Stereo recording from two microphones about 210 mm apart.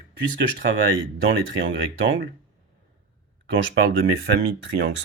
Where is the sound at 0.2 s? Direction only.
55° right (ahead or behind).